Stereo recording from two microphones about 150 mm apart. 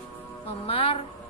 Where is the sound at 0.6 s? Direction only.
35° left (ahead or behind).